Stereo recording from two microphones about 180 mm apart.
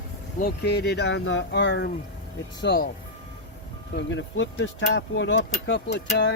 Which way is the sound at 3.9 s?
90° left.